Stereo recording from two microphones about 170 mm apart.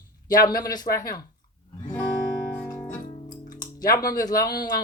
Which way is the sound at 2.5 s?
15° left (ahead or behind).